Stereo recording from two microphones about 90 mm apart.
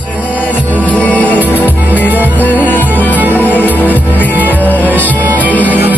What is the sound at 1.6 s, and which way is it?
Music, 20° right (ahead or behind).